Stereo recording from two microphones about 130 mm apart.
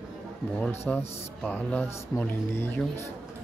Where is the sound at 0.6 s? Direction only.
15° left (ahead or behind).